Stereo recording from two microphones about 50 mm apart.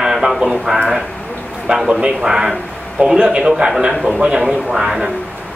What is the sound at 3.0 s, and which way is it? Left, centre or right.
Speech, right.